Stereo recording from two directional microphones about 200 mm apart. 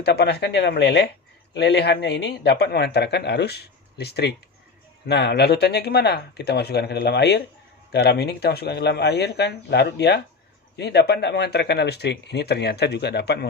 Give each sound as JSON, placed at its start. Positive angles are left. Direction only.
{"t": 0.0, "sound": "speech", "side_deg": 55}